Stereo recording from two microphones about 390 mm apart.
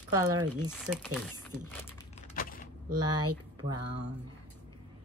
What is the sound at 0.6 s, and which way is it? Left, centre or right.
Speech, centre.